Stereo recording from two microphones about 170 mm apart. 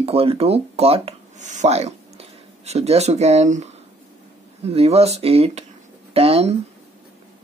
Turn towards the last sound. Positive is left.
turn(degrees=-35)  # may be behind; listen again after turning